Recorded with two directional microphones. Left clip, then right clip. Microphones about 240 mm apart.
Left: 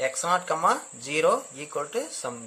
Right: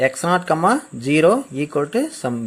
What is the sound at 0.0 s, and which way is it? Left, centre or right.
Speech, centre.